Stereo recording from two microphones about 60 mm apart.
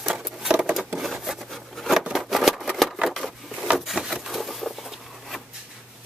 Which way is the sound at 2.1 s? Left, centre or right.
Centre.